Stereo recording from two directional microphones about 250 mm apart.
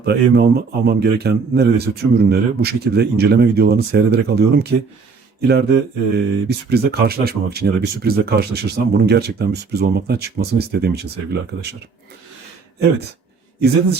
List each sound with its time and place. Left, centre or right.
0.0 s speech: right